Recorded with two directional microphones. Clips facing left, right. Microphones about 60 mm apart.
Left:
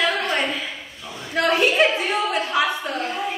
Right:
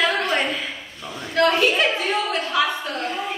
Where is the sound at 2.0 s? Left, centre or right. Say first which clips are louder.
Left 1 dB; centre.